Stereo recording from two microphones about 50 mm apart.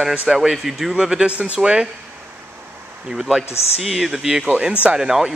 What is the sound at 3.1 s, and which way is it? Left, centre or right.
Speech, centre.